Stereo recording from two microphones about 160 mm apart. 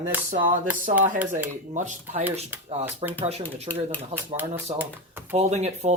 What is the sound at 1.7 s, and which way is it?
Speech, 50° right (ahead or behind).